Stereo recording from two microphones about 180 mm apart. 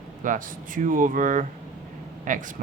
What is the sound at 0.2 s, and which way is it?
Speech, 45° right (ahead or behind).